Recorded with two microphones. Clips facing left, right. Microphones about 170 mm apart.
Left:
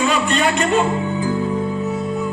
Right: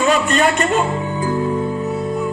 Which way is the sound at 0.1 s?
45° right (ahead or behind).